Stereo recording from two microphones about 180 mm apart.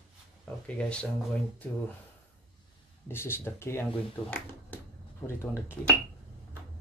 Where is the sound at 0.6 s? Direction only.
5° left (ahead or behind).